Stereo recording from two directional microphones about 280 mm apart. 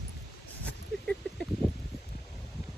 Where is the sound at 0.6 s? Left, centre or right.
Centre.